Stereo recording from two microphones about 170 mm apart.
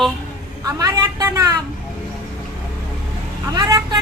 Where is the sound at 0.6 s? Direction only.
20° right (ahead or behind).